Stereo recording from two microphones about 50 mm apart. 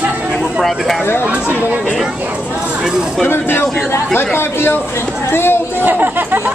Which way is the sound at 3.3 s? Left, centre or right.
Left.